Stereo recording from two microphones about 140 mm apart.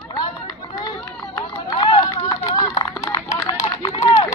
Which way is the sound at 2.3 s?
25° left (ahead or behind).